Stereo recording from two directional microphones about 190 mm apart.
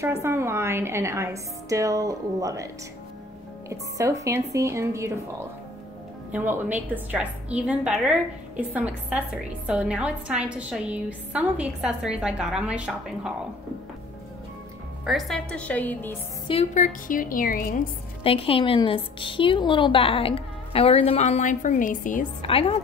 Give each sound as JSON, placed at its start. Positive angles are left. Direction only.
{"t": 0.0, "sound": "a woman's voice", "side_deg": -15}
{"t": 6.3, "sound": "a woman's voice", "side_deg": -10}
{"t": 15.0, "sound": "a woman's voice", "side_deg": 0}
{"t": 16.4, "sound": "a woman's voice", "side_deg": 35}
{"t": 18.2, "sound": "a woman's voice", "side_deg": 30}
{"t": 22.4, "sound": "a woman's voice", "side_deg": 30}